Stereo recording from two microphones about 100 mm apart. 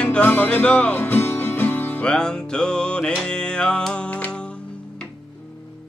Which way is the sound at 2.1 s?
10° left (ahead or behind).